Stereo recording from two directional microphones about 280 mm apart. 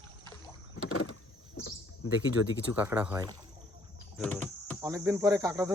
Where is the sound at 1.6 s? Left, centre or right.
Left.